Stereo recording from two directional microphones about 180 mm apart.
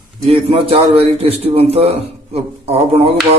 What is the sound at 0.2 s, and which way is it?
A man's voice, 35° right (ahead or behind).